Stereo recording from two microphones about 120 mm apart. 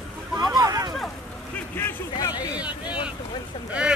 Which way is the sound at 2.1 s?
35° left (ahead or behind).